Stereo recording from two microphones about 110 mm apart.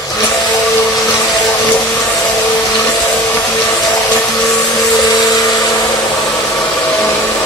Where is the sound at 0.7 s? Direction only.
35° left (ahead or behind).